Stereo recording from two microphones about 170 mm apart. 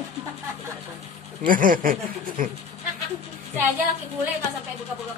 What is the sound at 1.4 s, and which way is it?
A man's voice, 55° right (ahead or behind).